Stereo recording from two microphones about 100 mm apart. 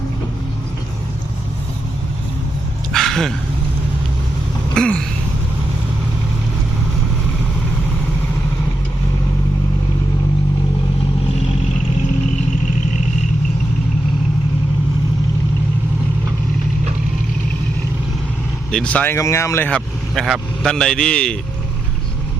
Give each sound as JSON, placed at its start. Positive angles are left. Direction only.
{"t": 2.9, "sound": "dog", "side_deg": 5}
{"t": 4.7, "sound": "a sound", "side_deg": 5}
{"t": 18.7, "sound": "speech", "side_deg": 10}
{"t": 19.1, "sound": "speech", "side_deg": 30}
{"t": 20.1, "sound": "a man's voice", "side_deg": 0}